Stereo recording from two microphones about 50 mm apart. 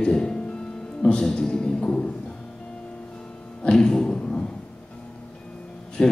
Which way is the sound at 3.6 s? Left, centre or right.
Centre.